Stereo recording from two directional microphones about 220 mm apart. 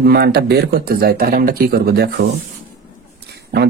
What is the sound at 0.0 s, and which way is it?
Speech, 45° right (ahead or behind).